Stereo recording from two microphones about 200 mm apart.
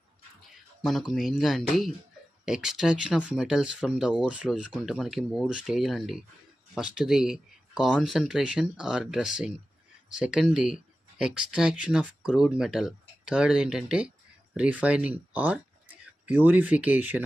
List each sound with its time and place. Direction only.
0.5 s speech: centre (ahead or behind)